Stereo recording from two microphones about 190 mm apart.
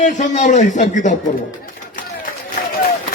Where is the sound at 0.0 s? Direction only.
40° left (ahead or behind).